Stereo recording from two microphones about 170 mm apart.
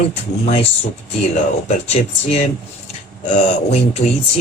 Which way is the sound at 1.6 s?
40° left (ahead or behind).